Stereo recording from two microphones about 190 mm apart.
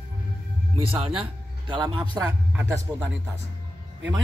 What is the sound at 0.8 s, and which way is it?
Speech, 30° right (ahead or behind).